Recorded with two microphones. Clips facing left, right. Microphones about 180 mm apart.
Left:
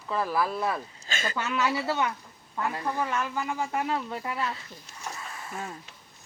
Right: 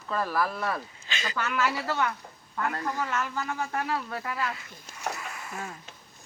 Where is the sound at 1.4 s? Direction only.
20° left (ahead or behind).